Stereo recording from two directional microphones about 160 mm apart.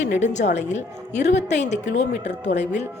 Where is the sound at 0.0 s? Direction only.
45° left (ahead or behind).